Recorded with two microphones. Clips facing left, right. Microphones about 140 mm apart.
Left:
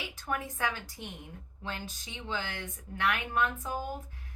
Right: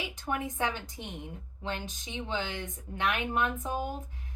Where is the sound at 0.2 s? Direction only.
20° right (ahead or behind).